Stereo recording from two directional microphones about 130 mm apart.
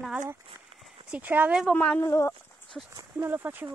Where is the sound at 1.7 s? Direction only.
10° left (ahead or behind).